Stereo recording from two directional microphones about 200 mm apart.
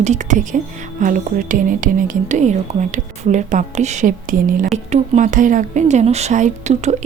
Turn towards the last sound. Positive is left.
turn(degrees=-35)  # may be behind; listen again after turning